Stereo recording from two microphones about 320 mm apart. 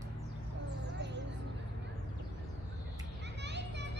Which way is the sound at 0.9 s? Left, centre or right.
Right.